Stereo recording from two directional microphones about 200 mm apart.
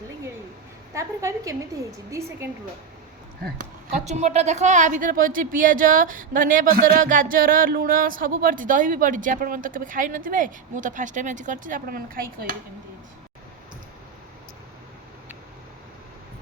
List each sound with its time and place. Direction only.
0.9 s a woman's voice: 15° right (ahead or behind)
3.4 s a woman's voice: 40° right (ahead or behind)